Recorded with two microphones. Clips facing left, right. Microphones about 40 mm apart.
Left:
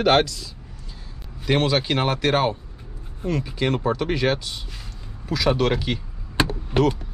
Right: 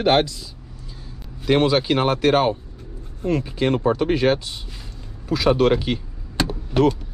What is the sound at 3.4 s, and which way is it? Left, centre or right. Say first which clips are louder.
Speech: right 2 dB; centre.